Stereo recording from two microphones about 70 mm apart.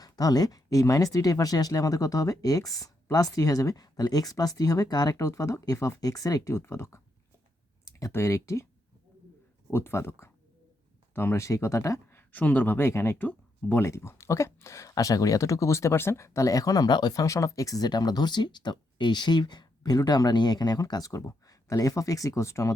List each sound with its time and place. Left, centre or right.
0.0 s speech: left
5.1 s speech: left
6.5 s speech: left
7.9 s clicking: left
8.1 s speech: left
9.7 s speech: left
12.9 s speech: left
13.1 s speech: left
13.8 s speech: left
17.2 s speech: left